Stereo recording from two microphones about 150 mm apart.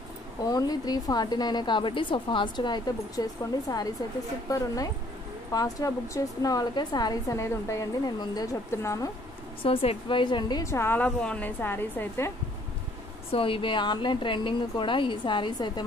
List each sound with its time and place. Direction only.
0.4 s a woman's voice: 25° left (ahead or behind)
9.6 s a woman's voice: 40° left (ahead or behind); by 12.3 s 15° left (ahead or behind)
13.3 s a woman's voice: 35° left (ahead or behind)